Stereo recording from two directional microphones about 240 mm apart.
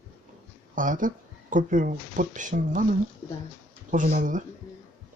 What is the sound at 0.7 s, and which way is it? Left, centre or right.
Speech, right.